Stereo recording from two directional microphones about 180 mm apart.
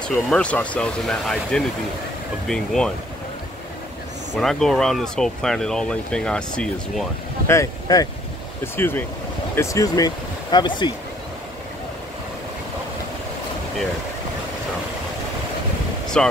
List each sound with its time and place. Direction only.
0.1 s speech: 5° left (ahead or behind)
4.4 s speech: centre (ahead or behind)
7.5 s speech: 20° left (ahead or behind)
16.1 s speech: 5° left (ahead or behind)